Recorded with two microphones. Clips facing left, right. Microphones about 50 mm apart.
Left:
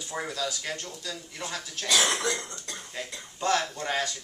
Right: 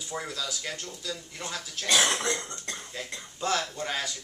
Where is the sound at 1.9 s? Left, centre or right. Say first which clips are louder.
Even; right.